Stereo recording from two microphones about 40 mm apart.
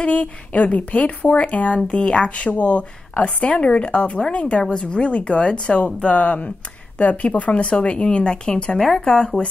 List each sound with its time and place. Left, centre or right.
0.0 s a woman's voice: left
8.7 s speech: centre
9.4 s speech: left